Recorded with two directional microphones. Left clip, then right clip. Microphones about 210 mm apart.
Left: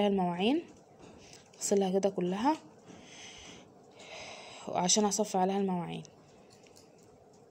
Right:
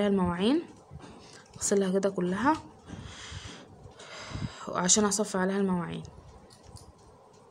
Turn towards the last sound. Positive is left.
turn(degrees=10)  # may be behind; listen again after turning